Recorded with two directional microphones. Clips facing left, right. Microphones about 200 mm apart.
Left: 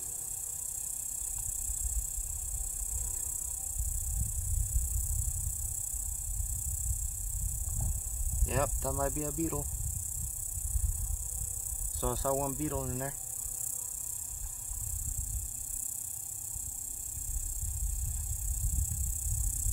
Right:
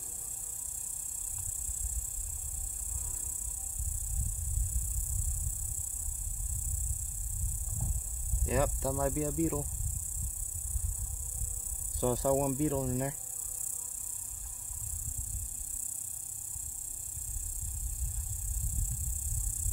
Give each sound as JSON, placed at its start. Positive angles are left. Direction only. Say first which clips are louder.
{"t": 8.5, "sound": "music", "louder": "right 2 dB", "side_deg": -5}
{"t": 12.0, "sound": "speech", "louder": "right 4 dB", "side_deg": -15}